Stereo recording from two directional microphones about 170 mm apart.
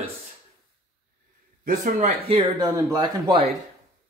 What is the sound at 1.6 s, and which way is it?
Speech, 55° right (ahead or behind).